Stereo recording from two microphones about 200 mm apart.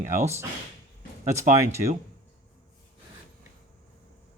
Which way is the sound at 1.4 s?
15° right (ahead or behind).